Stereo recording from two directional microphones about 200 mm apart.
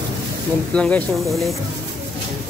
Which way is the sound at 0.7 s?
5° left (ahead or behind).